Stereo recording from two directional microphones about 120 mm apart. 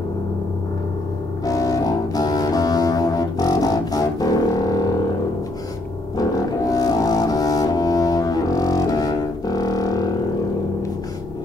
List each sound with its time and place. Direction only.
1.4 s music: 30° left (ahead or behind)
6.1 s music: 30° left (ahead or behind)